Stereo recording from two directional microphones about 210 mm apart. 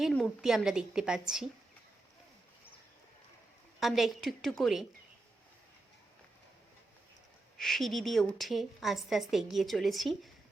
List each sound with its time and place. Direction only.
0.0 s a woman's voice: centre (ahead or behind)
3.8 s a woman's voice: centre (ahead or behind)
7.6 s a woman's voice: centre (ahead or behind)